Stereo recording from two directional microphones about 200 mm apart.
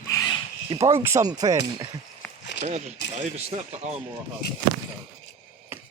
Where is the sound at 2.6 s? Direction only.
35° right (ahead or behind).